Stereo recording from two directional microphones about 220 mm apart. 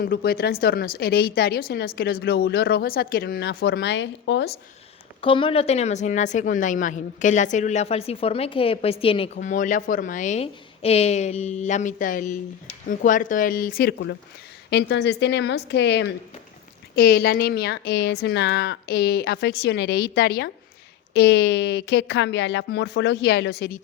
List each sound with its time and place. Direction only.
0.0 s speech: 45° left (ahead or behind)
5.2 s speech: 25° left (ahead or behind); by 23.8 s 45° left (ahead or behind)